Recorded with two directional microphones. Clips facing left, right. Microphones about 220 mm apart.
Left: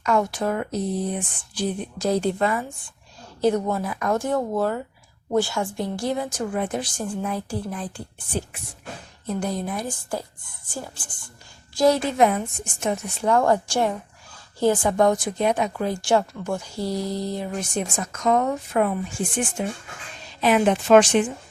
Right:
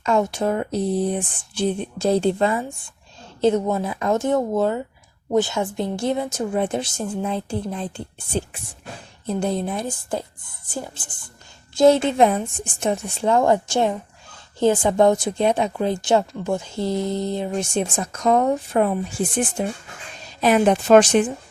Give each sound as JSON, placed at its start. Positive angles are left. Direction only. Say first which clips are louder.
{"t": 0.0, "sound": "a woman's voice", "louder": "right 2 dB", "side_deg": -25}